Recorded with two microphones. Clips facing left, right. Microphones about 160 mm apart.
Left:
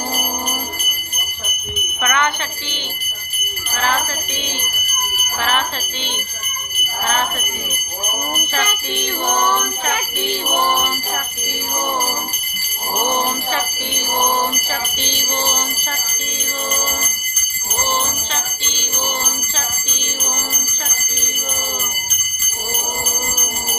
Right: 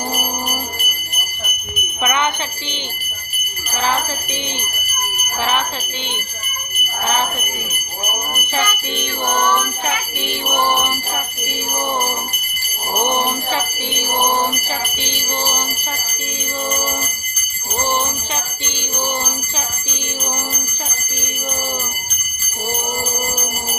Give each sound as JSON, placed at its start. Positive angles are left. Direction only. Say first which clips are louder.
{"t": 2.0, "sound": "jingle bell", "louder": "even", "side_deg": -20}
{"t": 3.8, "sound": "mantra", "louder": "right 1 dB", "side_deg": -20}
{"t": 5.4, "sound": "mantra", "louder": "right 1 dB", "side_deg": -15}
{"t": 7.1, "sound": "mantra", "louder": "right 1 dB", "side_deg": -15}
{"t": 10.6, "sound": "mantra", "louder": "right 2 dB", "side_deg": -15}
{"t": 13.0, "sound": "mantra", "louder": "right 1 dB", "side_deg": -15}
{"t": 18.6, "sound": "mantra", "louder": "right 2 dB", "side_deg": -15}